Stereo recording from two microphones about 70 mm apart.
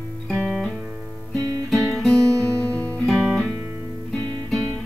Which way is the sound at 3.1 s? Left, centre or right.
Centre.